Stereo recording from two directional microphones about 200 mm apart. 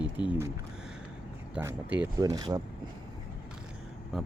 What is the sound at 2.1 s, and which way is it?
Speech, 20° right (ahead or behind).